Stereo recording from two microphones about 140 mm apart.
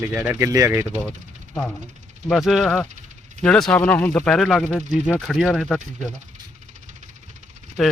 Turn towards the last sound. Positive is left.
turn(degrees=0)  # may be behind; listen again after turning